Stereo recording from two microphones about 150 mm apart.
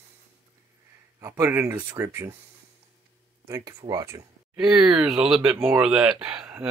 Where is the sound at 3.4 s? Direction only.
20° right (ahead or behind).